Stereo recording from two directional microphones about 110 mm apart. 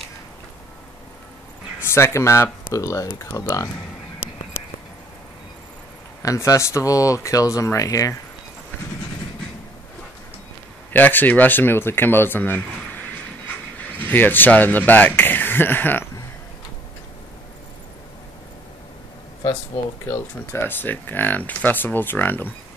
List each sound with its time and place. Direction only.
1.8 s speech: 20° left (ahead or behind)
6.2 s speech: 30° left (ahead or behind)
10.9 s speech: 15° left (ahead or behind)
13.9 s speech: 15° left (ahead or behind)
20.1 s speech: 20° left (ahead or behind)